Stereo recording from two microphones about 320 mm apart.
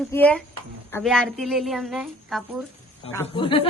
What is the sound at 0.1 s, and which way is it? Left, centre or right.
A woman's voice, centre.